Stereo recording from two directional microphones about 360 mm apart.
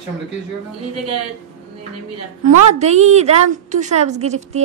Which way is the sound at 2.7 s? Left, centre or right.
Centre.